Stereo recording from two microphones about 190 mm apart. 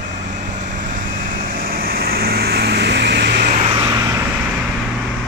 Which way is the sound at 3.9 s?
15° right (ahead or behind).